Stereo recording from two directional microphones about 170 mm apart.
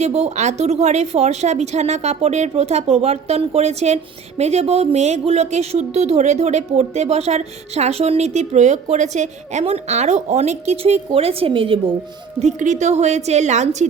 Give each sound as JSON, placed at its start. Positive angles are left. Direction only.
{"t": 0.0, "sound": "speech", "side_deg": -40}
{"t": 12.4, "sound": "a woman's voice", "side_deg": -45}